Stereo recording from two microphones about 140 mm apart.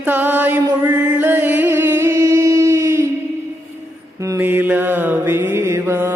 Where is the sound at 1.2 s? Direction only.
15° right (ahead or behind).